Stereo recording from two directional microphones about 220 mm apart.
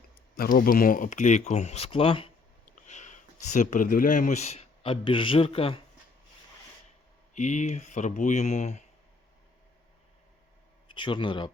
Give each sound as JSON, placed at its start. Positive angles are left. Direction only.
{"t": 0.3, "sound": "a man's voice", "side_deg": 40}
{"t": 7.3, "sound": "speech", "side_deg": 35}
{"t": 10.8, "sound": "speech", "side_deg": 20}